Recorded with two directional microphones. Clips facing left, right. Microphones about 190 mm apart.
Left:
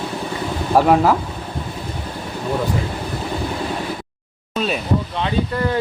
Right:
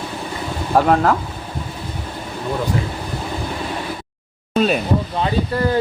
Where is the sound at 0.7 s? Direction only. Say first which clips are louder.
Left 1 dB; 5° left (ahead or behind).